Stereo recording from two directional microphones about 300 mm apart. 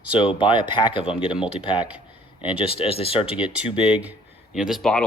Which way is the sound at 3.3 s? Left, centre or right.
Centre.